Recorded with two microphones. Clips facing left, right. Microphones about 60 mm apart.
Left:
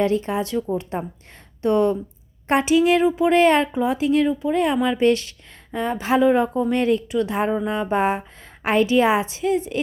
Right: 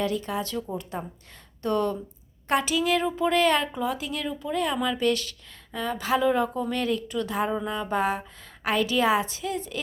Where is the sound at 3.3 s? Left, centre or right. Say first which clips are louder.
Left 5 dB; left.